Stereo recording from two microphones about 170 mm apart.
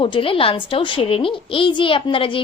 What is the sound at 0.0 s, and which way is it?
A woman's voice, 30° left (ahead or behind).